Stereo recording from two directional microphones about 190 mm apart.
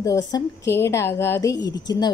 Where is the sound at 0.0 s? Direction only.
15° left (ahead or behind).